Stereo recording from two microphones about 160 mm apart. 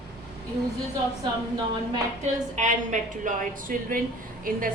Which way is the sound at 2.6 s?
50° right (ahead or behind).